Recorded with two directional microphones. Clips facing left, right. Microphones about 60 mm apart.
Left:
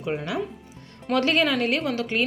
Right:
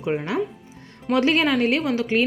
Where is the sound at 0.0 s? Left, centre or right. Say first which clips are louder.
Right 4 dB; right.